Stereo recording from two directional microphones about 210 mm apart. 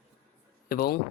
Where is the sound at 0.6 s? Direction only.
45° left (ahead or behind).